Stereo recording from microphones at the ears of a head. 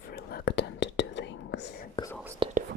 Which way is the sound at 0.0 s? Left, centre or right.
Left.